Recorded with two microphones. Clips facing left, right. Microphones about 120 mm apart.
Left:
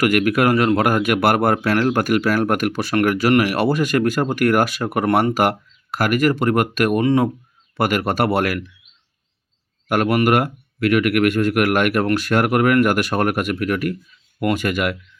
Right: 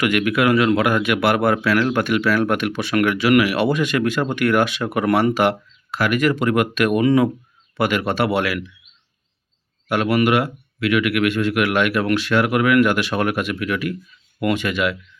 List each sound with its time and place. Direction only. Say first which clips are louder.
0.0 s speech: left 2 dB; 40° left (ahead or behind)
7.0 s speech: right 2 dB; 30° left (ahead or behind)
7.8 s speech: left 1 dB; 40° left (ahead or behind)
9.9 s speech: left 1 dB; 45° left (ahead or behind)